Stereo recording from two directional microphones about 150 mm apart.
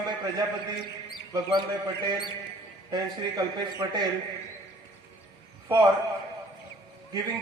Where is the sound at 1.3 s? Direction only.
30° right (ahead or behind).